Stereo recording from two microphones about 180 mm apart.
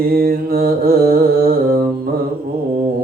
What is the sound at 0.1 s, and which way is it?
Mantra, 55° right (ahead or behind).